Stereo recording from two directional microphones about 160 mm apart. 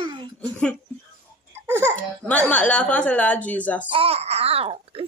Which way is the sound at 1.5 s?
15° right (ahead or behind).